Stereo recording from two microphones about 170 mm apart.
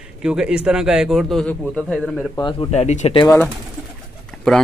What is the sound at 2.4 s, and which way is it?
Speech, 25° left (ahead or behind).